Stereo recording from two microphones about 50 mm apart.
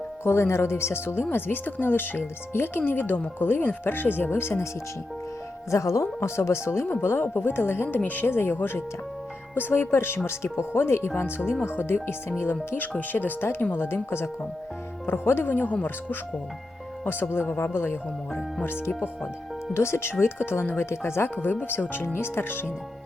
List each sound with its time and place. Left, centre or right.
0.3 s speech: left
5.7 s speech: left
6.1 s speech: left
7.0 s speech: left
13.0 s speech: left
13.7 s speech: left
17.1 s speech: left
19.7 s speech: left
21.4 s speech: left